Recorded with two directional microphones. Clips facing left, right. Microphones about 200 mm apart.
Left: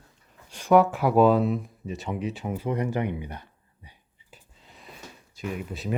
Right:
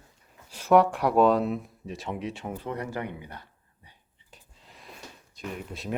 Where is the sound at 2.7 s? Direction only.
20° left (ahead or behind).